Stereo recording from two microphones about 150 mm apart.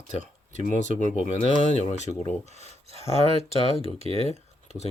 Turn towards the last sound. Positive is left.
turn(degrees=45)  # may be behind; listen again after turning